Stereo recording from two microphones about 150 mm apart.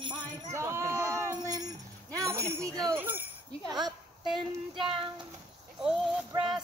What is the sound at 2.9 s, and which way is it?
Jingle bell, 15° right (ahead or behind).